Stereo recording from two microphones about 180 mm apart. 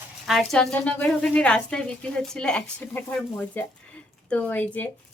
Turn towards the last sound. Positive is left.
turn(degrees=10)  # may be behind; listen again after turning